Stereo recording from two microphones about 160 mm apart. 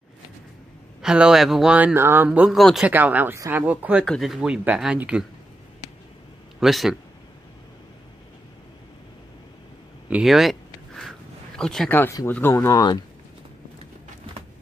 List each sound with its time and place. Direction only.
1.0 s speech: 5° right (ahead or behind)
4.0 s speech: centre (ahead or behind)
6.6 s speech: centre (ahead or behind)
10.0 s a sound: 5° right (ahead or behind)
11.9 s speech: 10° left (ahead or behind)